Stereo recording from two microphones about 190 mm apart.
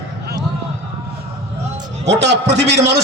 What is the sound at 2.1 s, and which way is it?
Speech, 65° right (ahead or behind).